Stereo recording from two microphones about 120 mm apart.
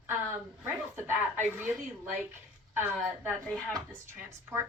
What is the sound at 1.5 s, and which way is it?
Speech, 15° right (ahead or behind).